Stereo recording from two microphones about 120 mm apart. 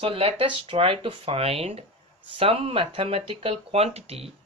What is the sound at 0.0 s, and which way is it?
Speech, 55° right (ahead or behind).